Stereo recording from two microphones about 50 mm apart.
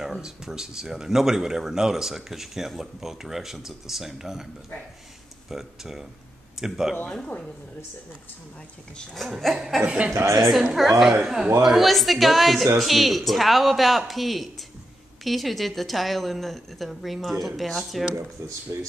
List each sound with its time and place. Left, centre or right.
0.0 s speech: centre
5.5 s speech: centre
9.1 s speech: centre
9.8 s speech: right
10.3 s speech: centre
18.7 s speech: right